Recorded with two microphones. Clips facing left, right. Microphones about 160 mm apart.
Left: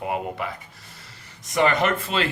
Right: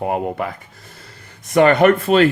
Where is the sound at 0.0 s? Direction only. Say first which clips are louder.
Right 6 dB; 45° right (ahead or behind).